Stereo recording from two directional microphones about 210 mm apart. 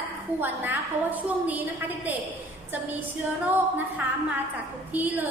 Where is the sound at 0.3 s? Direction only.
10° right (ahead or behind).